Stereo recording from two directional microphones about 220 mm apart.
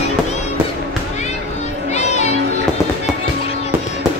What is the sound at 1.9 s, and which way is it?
Music, 30° left (ahead or behind).